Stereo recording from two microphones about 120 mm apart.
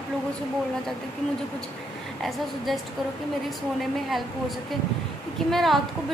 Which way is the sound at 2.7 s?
Centre (ahead or behind).